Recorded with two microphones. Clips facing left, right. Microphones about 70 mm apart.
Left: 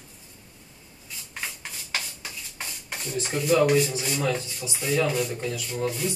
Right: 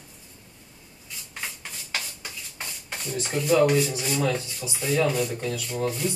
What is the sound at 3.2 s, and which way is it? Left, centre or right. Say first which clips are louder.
Rub: right 1 dB; centre.